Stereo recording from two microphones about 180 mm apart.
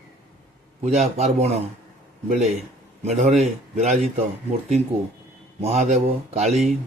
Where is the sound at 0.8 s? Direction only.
35° right (ahead or behind).